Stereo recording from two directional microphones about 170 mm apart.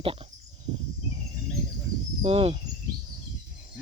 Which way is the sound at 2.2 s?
35° right (ahead or behind).